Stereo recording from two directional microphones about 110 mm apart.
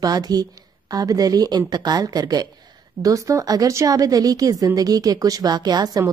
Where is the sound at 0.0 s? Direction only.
35° right (ahead or behind).